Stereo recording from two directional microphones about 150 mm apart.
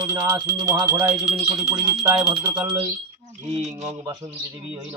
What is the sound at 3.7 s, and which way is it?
Speech, 45° right (ahead or behind).